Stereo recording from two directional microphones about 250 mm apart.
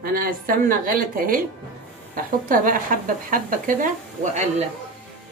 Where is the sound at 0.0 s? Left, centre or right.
Right.